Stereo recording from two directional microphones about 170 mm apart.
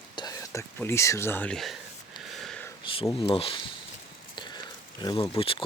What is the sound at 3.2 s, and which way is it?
Speech, 35° left (ahead or behind).